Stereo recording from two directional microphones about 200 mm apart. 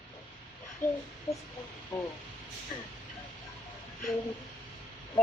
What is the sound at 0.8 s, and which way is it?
Speech, 40° left (ahead or behind).